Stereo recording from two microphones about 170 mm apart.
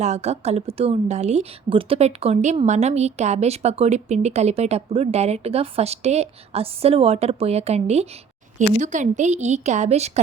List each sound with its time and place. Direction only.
0.0 s a woman's voice: 40° right (ahead or behind)